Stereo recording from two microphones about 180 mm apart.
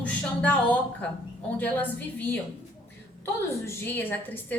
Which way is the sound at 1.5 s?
10° left (ahead or behind).